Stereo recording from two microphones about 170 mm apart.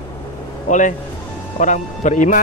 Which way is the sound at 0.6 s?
45° left (ahead or behind).